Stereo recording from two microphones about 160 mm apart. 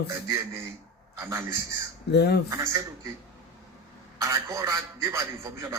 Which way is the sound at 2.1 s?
90° left.